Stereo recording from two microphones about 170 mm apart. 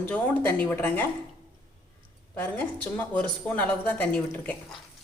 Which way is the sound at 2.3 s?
10° left (ahead or behind).